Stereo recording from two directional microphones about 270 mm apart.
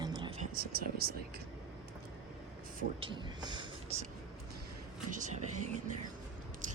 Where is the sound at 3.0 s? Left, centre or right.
Centre.